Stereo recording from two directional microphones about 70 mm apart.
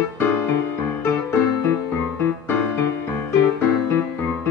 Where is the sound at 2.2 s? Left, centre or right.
Left.